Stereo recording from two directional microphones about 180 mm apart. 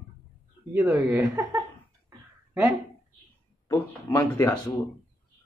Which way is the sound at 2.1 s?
15° right (ahead or behind).